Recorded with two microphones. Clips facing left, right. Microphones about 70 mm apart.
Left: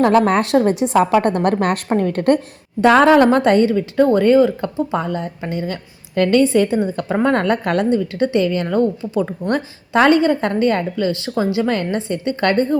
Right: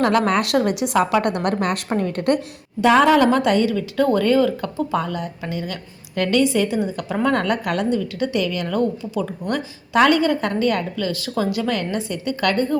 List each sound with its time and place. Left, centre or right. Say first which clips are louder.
0.0 s a woman's voice: left 4 dB; left